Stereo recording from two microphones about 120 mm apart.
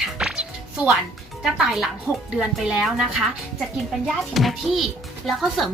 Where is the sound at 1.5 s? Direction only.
5° right (ahead or behind).